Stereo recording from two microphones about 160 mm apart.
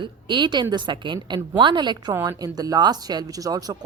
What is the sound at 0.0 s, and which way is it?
Speech, 30° right (ahead or behind).